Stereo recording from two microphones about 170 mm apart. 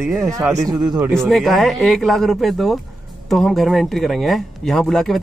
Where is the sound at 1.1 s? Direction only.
Centre (ahead or behind).